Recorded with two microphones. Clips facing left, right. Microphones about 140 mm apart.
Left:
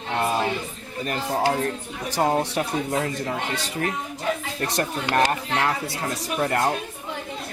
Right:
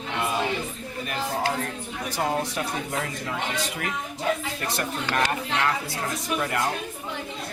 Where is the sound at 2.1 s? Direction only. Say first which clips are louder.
Left 5 dB; 35° left (ahead or behind).